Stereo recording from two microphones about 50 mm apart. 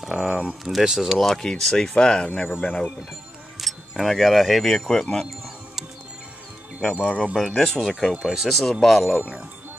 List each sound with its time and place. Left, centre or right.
0.0 s speech: centre
1.1 s speech: centre; by 2.9 s left
3.5 s speech: centre
6.8 s speech: centre
8.1 s speech: centre
8.5 s speech: centre